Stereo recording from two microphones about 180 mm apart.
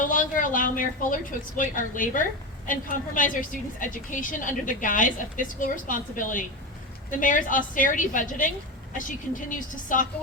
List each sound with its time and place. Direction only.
0.0 s a woman's voice: 50° left (ahead or behind)